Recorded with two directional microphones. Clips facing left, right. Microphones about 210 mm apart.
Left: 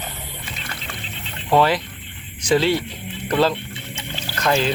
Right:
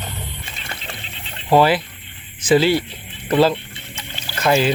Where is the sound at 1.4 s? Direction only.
5° right (ahead or behind).